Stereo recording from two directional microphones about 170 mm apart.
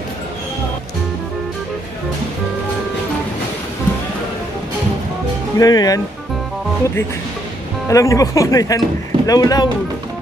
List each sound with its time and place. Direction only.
5.6 s a man's voice: 20° left (ahead or behind)
7.9 s a man's voice: 20° left (ahead or behind)